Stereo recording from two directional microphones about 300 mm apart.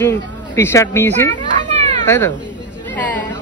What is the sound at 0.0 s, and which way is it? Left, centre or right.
A child's voice, centre.